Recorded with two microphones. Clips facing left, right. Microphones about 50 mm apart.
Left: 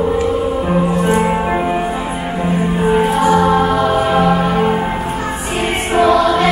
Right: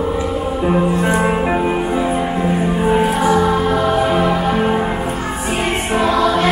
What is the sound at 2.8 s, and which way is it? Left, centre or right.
Music, centre.